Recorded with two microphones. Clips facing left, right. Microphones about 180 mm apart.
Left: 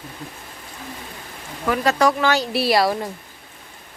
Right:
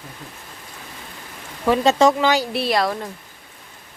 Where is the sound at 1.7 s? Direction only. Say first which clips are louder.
Right 3 dB; 25° right (ahead or behind).